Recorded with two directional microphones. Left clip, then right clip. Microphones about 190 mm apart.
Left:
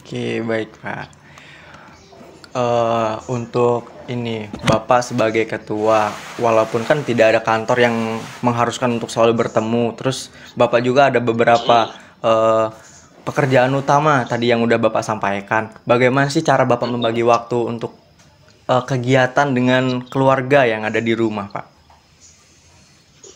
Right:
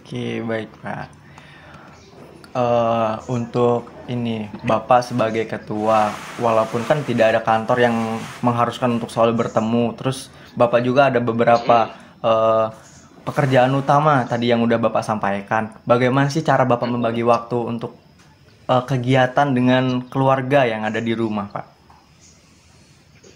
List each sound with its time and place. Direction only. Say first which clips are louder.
0.0 s speech: left 4 dB; 25° left (ahead or behind)
2.5 s speech: left 1 dB; 30° left (ahead or behind)